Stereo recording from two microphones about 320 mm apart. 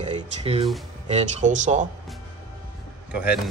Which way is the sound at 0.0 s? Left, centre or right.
Centre.